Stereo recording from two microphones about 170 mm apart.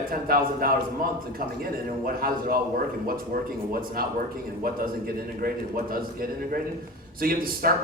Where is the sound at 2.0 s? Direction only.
60° right (ahead or behind).